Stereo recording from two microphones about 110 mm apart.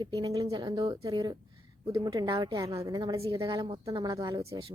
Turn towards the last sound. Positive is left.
turn(degrees=-55)  # may be behind; listen again after turning